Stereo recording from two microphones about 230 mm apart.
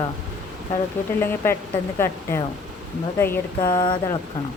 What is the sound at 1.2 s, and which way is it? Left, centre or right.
Speech, centre.